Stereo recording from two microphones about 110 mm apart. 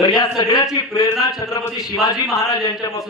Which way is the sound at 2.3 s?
30° left (ahead or behind).